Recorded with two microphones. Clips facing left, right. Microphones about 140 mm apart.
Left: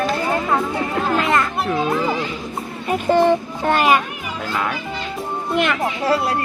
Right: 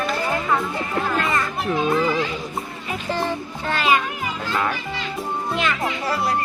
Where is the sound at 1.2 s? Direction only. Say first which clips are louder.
Left 6 dB; 90° left.